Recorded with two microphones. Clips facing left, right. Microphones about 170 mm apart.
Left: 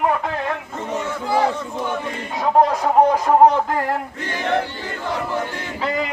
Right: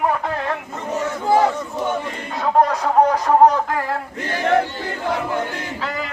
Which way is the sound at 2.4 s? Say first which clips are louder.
Left 1 dB; 20° left (ahead or behind).